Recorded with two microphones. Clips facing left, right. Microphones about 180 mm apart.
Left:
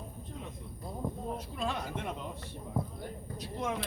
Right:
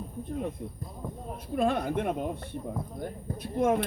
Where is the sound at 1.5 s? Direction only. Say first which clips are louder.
Right 13 dB; 55° right (ahead or behind).